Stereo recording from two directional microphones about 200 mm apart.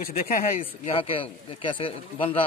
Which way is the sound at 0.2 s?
45° left (ahead or behind).